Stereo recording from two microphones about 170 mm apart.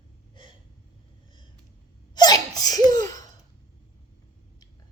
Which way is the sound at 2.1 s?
25° left (ahead or behind).